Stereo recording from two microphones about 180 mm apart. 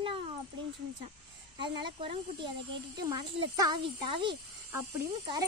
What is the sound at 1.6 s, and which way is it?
Speech, 30° right (ahead or behind).